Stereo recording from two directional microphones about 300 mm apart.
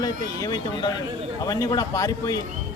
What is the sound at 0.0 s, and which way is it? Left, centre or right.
A man's voice, centre.